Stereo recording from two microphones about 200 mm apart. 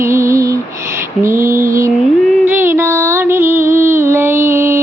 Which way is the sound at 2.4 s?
10° right (ahead or behind).